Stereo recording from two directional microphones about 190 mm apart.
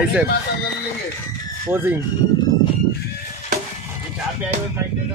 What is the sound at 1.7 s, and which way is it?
Speech, 10° right (ahead or behind).